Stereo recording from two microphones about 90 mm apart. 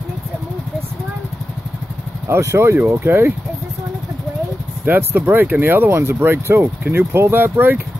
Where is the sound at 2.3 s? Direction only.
30° right (ahead or behind).